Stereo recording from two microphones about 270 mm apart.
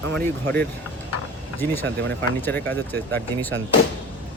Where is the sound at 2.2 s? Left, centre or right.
Centre.